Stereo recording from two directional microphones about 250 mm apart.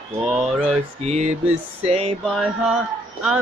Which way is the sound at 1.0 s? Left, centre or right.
Right.